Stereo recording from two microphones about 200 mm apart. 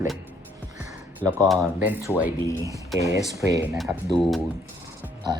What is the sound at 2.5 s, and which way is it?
Speech, 15° left (ahead or behind).